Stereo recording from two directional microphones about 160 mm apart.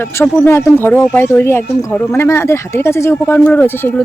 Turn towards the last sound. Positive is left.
turn(degrees=10)  # may be behind; listen again after turning